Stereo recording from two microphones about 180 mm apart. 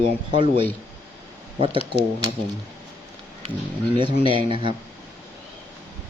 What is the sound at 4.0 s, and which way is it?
Speech, 30° right (ahead or behind).